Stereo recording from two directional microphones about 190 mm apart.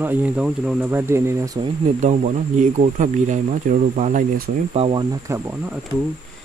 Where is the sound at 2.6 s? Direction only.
40° right (ahead or behind).